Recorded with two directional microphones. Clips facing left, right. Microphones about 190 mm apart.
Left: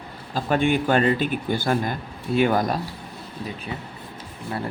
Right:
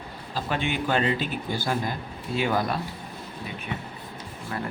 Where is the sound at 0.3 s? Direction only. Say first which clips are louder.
Left 7 dB; 50° left (ahead or behind).